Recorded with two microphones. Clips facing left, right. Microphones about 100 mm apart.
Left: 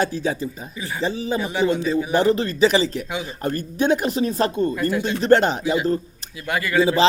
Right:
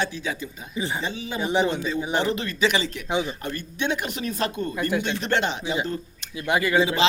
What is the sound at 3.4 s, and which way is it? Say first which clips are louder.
A man's voice: left 7 dB; 40° left (ahead or behind).